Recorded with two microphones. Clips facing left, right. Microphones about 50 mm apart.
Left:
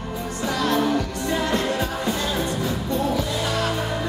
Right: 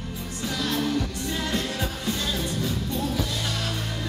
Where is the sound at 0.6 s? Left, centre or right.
Left.